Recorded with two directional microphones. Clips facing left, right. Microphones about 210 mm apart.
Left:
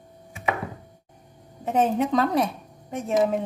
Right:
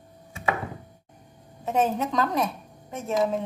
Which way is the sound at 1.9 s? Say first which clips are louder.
Left 4 dB; 30° left (ahead or behind).